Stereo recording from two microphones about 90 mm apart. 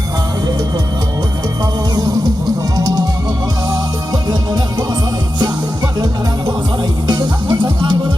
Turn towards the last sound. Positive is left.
turn(degrees=-50)  # may be behind; listen again after turning